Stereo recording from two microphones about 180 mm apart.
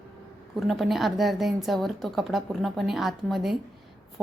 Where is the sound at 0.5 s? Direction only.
Centre (ahead or behind).